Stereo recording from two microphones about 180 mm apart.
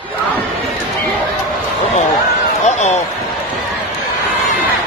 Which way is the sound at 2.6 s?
40° left (ahead or behind).